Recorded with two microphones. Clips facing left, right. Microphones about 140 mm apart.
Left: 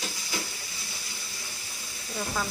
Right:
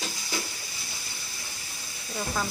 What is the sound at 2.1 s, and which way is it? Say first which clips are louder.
Speech: right 1 dB; 5° right (ahead or behind).